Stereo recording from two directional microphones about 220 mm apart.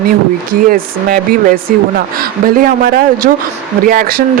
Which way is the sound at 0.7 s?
40° right (ahead or behind).